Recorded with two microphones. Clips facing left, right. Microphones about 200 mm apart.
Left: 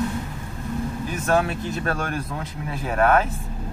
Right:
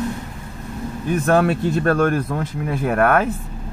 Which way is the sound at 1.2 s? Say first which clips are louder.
Right 5 dB; 55° right (ahead or behind).